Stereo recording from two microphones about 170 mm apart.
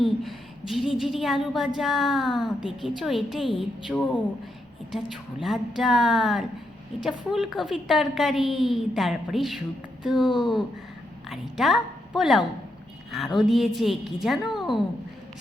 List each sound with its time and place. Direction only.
0.0 s a woman's voice: centre (ahead or behind)
4.9 s a woman's voice: centre (ahead or behind)
10.2 s speech: 25° left (ahead or behind)
11.3 s a woman's voice: centre (ahead or behind)